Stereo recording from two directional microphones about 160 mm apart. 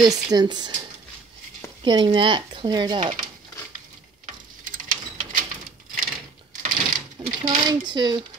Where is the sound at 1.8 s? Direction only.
30° right (ahead or behind).